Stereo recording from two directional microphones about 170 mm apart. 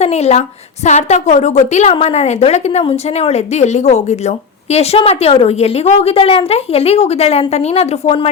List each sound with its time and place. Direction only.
0.0 s a woman's voice: 40° left (ahead or behind)